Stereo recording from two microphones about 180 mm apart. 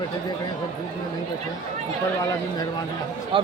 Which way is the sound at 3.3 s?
30° right (ahead or behind).